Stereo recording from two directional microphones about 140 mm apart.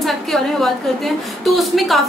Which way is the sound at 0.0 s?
Centre (ahead or behind).